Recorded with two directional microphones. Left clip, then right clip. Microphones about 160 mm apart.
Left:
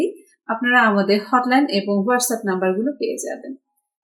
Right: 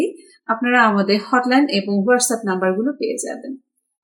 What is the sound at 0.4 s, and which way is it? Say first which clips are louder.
Speech: right 1 dB; 10° right (ahead or behind).